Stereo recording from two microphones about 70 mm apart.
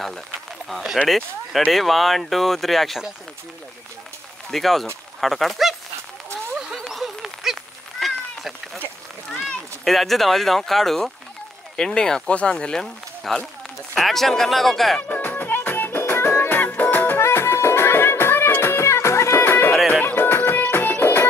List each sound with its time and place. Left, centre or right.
0.7 s speech: centre
4.5 s speech: centre
6.9 s a sound: centre
8.0 s cat: centre
9.3 s a sound: centre
9.8 s speech: centre
12.8 s speech: centre
15.0 s music: left